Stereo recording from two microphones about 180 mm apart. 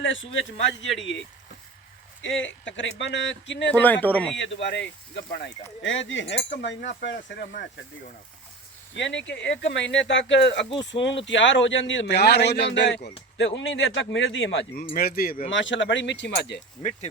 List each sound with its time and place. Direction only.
0.0 s speech: 90° left
2.2 s speech: 90° left
3.7 s speech: 10° left (ahead or behind)
4.6 s speech: 75° left (ahead or behind)
9.0 s a man's voice: 85° left
10.7 s speech: 30° left (ahead or behind)
11.3 s a man's voice: 90° left
13.3 s speech: 90° left
14.9 s speech: 55° left (ahead or behind)
15.4 s speech: 90° left